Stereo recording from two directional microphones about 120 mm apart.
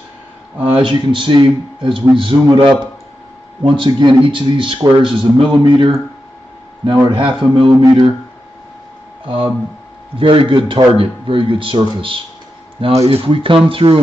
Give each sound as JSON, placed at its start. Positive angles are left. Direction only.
{"t": 0.6, "sound": "a man's voice", "side_deg": -45}
{"t": 7.1, "sound": "a man's voice", "side_deg": -45}
{"t": 9.2, "sound": "speech", "side_deg": -50}